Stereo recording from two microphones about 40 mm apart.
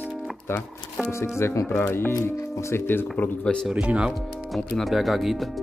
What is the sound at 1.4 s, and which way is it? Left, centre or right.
Speech, left.